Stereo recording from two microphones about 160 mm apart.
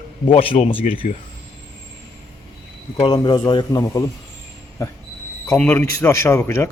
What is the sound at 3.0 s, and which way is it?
A man's voice, 25° left (ahead or behind).